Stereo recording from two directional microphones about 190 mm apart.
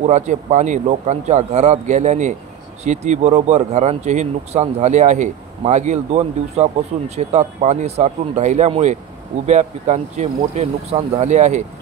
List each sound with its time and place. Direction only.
0.0 s speech: 40° right (ahead or behind)